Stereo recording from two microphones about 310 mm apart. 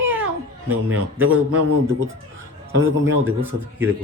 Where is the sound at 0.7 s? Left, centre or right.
Right.